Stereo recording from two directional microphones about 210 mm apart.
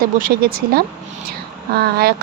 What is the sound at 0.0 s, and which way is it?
Speech, 45° right (ahead or behind).